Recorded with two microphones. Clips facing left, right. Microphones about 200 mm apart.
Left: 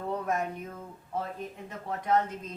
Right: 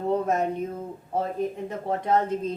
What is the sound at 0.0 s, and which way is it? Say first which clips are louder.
A woman's voice: right 7 dB; 25° right (ahead or behind).